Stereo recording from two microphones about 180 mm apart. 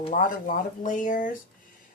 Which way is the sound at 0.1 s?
50° left (ahead or behind).